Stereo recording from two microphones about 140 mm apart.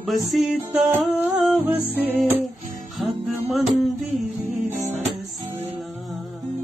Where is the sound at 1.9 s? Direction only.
15° right (ahead or behind).